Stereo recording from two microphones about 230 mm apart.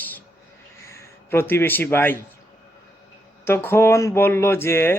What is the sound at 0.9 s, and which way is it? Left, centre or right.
A man's voice, centre.